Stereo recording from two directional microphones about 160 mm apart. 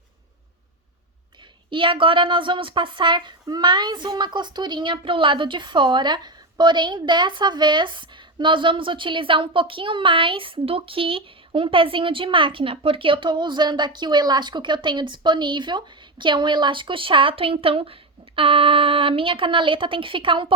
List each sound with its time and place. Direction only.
1.7 s a woman's voice: 30° right (ahead or behind)